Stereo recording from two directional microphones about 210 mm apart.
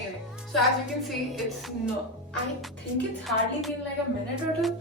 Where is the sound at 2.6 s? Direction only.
Centre (ahead or behind).